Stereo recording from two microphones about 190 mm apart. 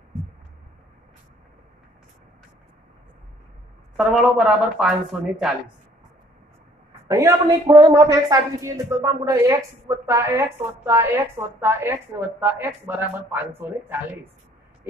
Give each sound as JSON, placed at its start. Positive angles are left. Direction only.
{"t": 3.9, "sound": "speech", "side_deg": 0}
{"t": 7.1, "sound": "a woman's voice", "side_deg": -15}